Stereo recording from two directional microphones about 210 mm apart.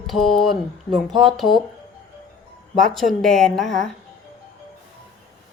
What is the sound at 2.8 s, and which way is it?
Speech, centre (ahead or behind).